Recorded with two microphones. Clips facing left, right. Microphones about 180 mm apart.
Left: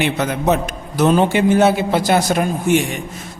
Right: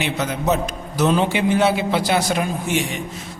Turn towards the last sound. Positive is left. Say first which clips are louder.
# left 6 dB
turn(degrees=50)  # may be behind; listen again after turning